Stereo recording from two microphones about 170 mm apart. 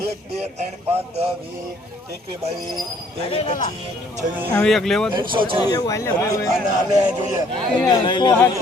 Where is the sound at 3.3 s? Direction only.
35° left (ahead or behind).